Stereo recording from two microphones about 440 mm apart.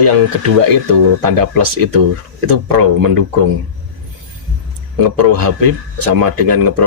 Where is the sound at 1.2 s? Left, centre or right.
Right.